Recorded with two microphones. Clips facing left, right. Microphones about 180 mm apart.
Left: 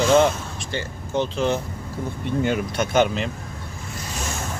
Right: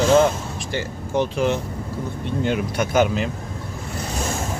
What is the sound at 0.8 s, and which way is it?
Speech, 15° right (ahead or behind).